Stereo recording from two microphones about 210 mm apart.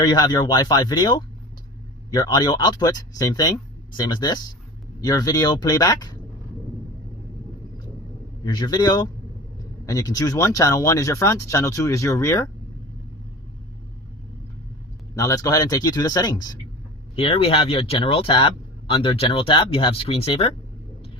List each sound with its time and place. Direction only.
0.0 s speech: 20° left (ahead or behind)
8.4 s speech: 20° left (ahead or behind)
15.1 s speech: 15° left (ahead or behind)